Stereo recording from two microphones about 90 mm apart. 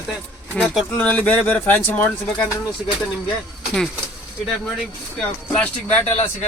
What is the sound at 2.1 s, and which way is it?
Speech, 10° left (ahead or behind).